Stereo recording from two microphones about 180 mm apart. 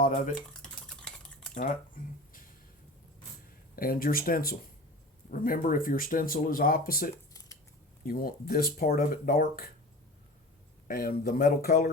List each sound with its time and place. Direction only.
0.0 s speech: 50° left (ahead or behind)
0.3 s stir: 5° left (ahead or behind)
3.8 s speech: 55° left (ahead or behind)
7.3 s scissors: 20° left (ahead or behind)
8.0 s speech: 55° left (ahead or behind)
10.8 s speech: 55° left (ahead or behind)